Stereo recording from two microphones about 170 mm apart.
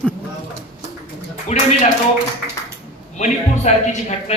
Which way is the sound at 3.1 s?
45° left (ahead or behind).